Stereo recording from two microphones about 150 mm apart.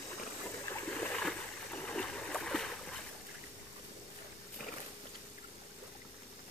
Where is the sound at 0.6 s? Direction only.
10° left (ahead or behind).